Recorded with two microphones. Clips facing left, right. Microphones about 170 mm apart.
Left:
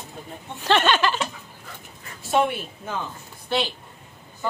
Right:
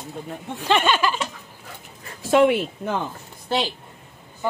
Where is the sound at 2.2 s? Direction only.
90° right.